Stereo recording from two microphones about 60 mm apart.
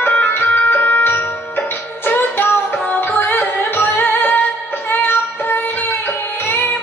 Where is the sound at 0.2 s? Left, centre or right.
Left.